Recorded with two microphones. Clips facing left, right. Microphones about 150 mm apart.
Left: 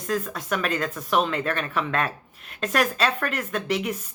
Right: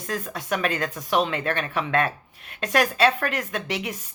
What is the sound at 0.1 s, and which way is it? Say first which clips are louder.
Speech: left 1 dB; 35° right (ahead or behind).